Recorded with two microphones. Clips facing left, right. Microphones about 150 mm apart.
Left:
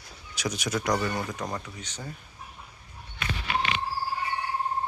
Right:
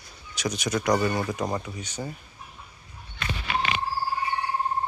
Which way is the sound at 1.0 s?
10° right (ahead or behind).